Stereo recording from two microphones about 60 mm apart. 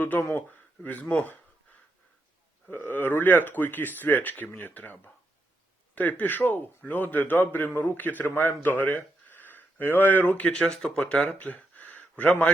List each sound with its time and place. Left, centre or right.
0.0 s speech: left
2.6 s a man's voice: left
10.5 s speech: centre